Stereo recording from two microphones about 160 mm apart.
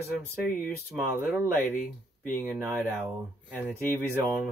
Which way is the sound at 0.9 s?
10° right (ahead or behind).